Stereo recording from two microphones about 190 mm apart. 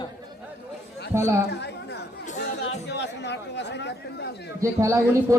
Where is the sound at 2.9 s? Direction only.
65° left (ahead or behind).